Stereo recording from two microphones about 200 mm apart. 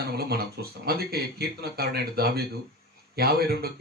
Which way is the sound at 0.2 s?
50° right (ahead or behind).